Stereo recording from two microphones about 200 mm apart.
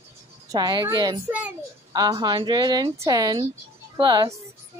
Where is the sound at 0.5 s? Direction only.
20° right (ahead or behind).